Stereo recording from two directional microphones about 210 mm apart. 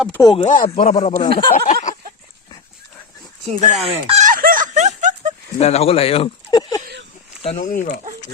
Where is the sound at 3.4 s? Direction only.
30° right (ahead or behind).